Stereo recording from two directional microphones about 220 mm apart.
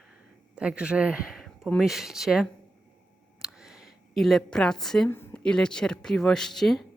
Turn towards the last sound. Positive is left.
turn(degrees=0)  # may be behind; listen again after turning